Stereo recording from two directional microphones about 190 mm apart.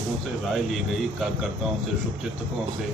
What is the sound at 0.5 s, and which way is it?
Speech, centre (ahead or behind).